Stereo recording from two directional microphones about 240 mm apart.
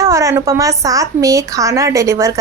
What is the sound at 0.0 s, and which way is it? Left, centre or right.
A woman's voice, centre.